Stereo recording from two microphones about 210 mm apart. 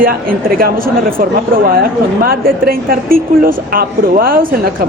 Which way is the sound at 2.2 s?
45° right (ahead or behind).